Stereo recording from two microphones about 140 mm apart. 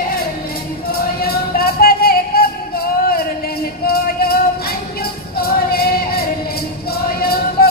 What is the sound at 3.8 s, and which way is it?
Music, 90° left.